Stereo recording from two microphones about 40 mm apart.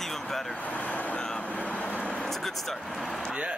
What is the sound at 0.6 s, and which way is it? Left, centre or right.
Vehicle, left.